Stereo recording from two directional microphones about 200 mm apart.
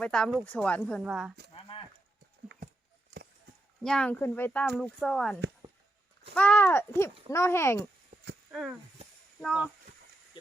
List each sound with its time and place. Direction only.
0.0 s speech: 5° left (ahead or behind)
1.5 s livestock: 25° left (ahead or behind)
3.8 s speech: 5° left (ahead or behind)
8.5 s speech: centre (ahead or behind)